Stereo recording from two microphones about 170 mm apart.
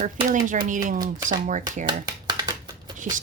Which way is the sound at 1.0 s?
20° right (ahead or behind).